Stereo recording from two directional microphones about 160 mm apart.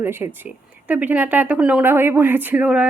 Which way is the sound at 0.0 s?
15° right (ahead or behind).